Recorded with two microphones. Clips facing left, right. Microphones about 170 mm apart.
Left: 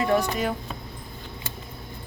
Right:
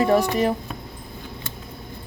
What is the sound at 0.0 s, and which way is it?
Speech, 30° right (ahead or behind).